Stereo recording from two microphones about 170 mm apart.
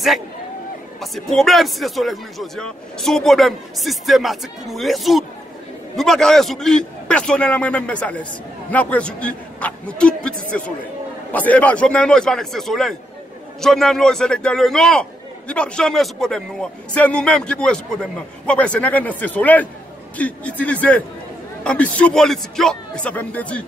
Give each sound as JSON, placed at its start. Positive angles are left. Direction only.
{"t": 1.1, "sound": "a man's voice", "side_deg": 0}